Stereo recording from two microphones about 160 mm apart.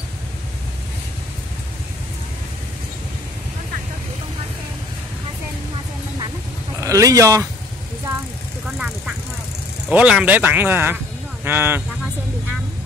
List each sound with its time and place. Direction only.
6.8 s speech: 20° right (ahead or behind)
8.6 s vehicle: 5° right (ahead or behind)
9.8 s speech: 5° right (ahead or behind)